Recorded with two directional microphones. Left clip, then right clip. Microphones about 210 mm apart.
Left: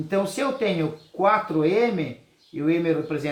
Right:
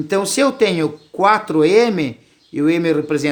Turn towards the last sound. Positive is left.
turn(degrees=-50)  # may be behind; listen again after turning